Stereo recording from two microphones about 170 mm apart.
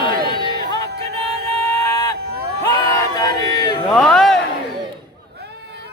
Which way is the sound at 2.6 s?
20° left (ahead or behind).